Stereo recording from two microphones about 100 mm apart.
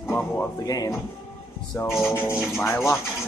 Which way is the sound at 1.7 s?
30° left (ahead or behind).